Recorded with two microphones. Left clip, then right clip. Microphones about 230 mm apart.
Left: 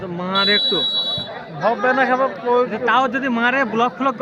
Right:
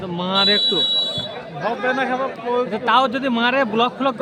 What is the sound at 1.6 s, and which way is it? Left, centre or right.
Speech, left.